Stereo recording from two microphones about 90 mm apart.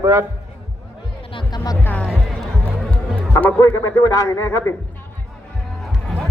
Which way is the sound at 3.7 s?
30° left (ahead or behind).